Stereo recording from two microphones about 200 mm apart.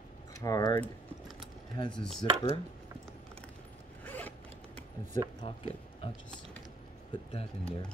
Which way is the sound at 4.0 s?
10° left (ahead or behind).